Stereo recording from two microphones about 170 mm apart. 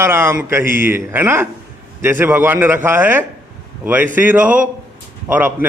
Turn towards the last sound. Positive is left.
turn(degrees=-10)  # may be behind; listen again after turning